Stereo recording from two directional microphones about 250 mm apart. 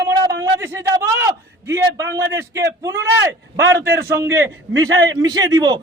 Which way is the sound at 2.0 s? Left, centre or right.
Centre.